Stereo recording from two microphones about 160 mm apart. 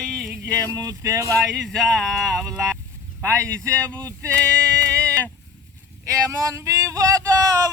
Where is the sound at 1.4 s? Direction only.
Centre (ahead or behind).